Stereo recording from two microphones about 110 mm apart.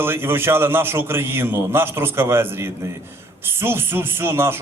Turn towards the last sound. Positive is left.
turn(degrees=-20)  # may be behind; listen again after turning